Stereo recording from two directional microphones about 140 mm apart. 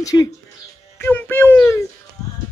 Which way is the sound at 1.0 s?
15° left (ahead or behind).